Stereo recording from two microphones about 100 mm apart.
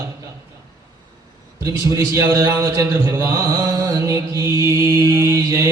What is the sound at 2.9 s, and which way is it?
Mantra, 30° right (ahead or behind).